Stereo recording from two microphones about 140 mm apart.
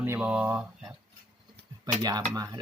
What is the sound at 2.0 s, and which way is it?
Speech, 25° right (ahead or behind).